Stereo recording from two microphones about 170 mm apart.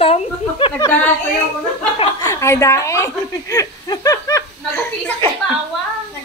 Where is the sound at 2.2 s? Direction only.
15° left (ahead or behind).